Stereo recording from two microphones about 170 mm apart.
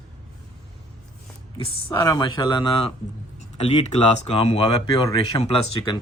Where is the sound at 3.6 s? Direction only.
40° left (ahead or behind).